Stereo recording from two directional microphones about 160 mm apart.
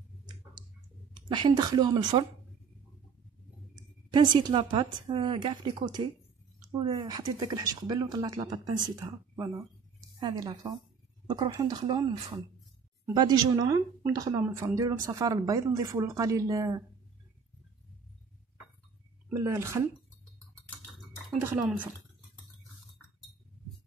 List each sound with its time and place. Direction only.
1.3 s a woman's voice: 30° right (ahead or behind)
3.7 s a woman's voice: 30° right (ahead or behind)
19.3 s a woman's voice: 20° right (ahead or behind)
21.4 s speech: 15° right (ahead or behind)